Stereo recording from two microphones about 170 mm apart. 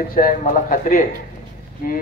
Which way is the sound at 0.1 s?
50° left (ahead or behind).